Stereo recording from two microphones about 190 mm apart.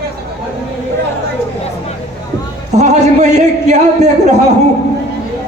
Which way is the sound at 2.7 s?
35° right (ahead or behind).